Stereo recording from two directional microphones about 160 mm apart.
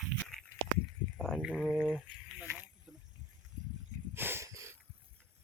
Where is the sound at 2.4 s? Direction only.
10° right (ahead or behind).